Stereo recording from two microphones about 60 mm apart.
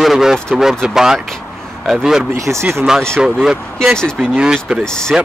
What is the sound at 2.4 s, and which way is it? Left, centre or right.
Speech, right.